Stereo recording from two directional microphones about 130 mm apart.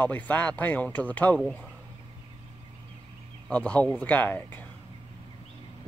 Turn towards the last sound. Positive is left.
turn(degrees=15)  # may be behind; listen again after turning